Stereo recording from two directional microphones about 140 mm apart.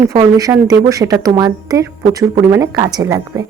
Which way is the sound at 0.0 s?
25° right (ahead or behind).